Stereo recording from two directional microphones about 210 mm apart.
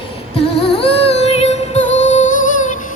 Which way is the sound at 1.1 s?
30° left (ahead or behind).